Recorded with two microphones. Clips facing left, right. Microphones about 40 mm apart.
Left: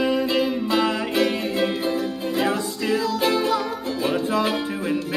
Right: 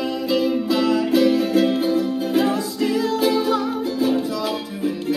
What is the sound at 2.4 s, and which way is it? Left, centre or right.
Music, left.